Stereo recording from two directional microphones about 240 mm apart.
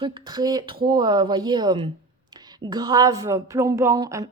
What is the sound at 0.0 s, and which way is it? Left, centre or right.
A woman's voice, centre.